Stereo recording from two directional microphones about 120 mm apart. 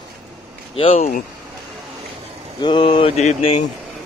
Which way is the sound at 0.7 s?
55° left (ahead or behind).